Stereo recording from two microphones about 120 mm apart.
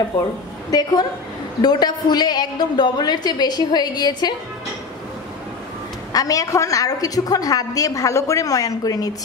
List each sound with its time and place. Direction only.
0.7 s a woman's voice: 35° left (ahead or behind)
6.1 s a woman's voice: 30° left (ahead or behind)